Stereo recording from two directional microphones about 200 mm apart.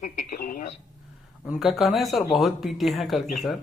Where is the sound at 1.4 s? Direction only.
Centre (ahead or behind).